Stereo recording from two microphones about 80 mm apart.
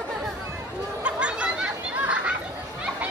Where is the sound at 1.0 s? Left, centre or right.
Centre.